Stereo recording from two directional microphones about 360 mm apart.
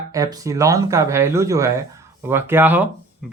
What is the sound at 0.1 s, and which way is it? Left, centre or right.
Speech, centre.